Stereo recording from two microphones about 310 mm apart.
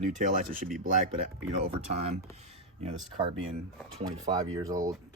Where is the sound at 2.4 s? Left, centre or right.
Right.